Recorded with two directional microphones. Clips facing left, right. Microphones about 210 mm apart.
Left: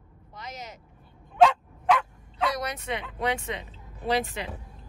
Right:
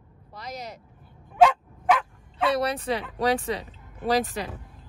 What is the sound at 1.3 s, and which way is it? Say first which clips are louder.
Bow-wow: right 1 dB; 5° right (ahead or behind).